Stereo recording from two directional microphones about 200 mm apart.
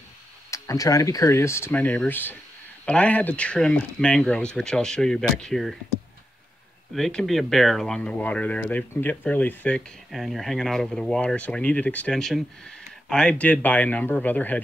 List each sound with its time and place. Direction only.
0.5 s speech: 15° left (ahead or behind); by 5.8 s centre (ahead or behind)
6.9 s speech: 5° left (ahead or behind)